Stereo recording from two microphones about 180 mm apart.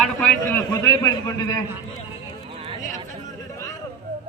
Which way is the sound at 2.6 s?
30° right (ahead or behind).